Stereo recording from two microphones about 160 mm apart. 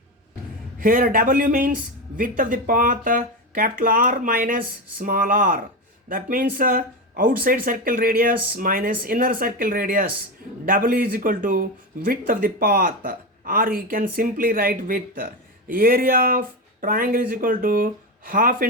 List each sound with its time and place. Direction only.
0.8 s speech: 60° right (ahead or behind)